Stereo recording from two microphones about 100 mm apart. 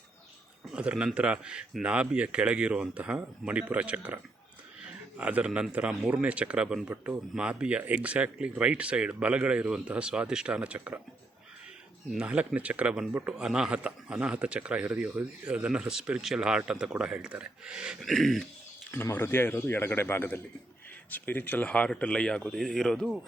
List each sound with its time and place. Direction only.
0.7 s a man's voice: 10° right (ahead or behind)
12.2 s speech: 15° right (ahead or behind)
18.0 s a man's voice: 5° left (ahead or behind)
19.1 s speech: 25° left (ahead or behind); by 23.1 s 5° left (ahead or behind)